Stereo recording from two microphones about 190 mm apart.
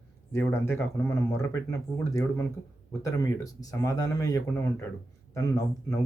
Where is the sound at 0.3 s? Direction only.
15° left (ahead or behind).